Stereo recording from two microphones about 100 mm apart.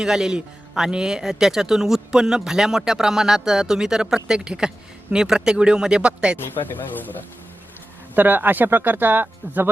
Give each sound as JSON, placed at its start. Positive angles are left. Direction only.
{"t": 0.0, "sound": "speech", "side_deg": -5}
{"t": 6.4, "sound": "speech", "side_deg": 20}
{"t": 8.1, "sound": "speech", "side_deg": -20}